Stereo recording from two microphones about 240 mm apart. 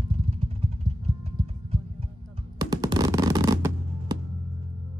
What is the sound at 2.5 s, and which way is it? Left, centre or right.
Music, centre.